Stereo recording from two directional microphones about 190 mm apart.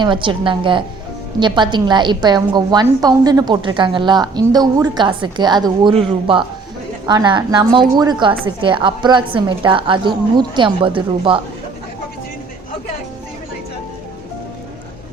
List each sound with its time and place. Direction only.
0.0 s a woman's voice: 25° right (ahead or behind)
7.1 s a woman's voice: 25° right (ahead or behind)